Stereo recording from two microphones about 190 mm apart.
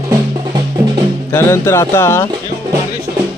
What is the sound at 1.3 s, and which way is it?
Speech, 15° left (ahead or behind).